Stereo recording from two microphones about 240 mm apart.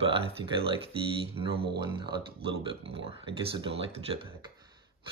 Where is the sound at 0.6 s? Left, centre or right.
Right.